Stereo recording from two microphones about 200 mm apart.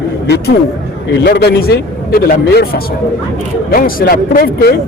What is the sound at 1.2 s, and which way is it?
A man's voice, 55° left (ahead or behind).